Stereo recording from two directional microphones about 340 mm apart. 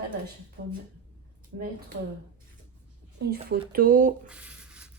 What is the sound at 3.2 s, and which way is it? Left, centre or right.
Speech, right.